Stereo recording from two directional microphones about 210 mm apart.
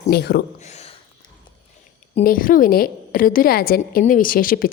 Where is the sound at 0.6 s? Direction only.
30° left (ahead or behind).